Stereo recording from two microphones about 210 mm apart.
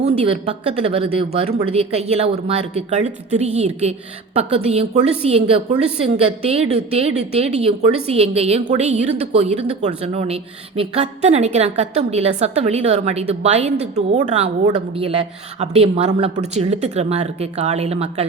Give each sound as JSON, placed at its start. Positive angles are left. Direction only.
{"t": 0.0, "sound": "a woman's voice", "side_deg": -30}